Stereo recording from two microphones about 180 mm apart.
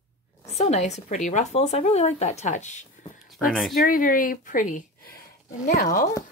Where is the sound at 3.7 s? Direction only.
50° left (ahead or behind).